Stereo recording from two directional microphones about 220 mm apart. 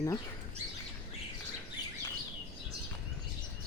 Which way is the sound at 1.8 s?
20° left (ahead or behind).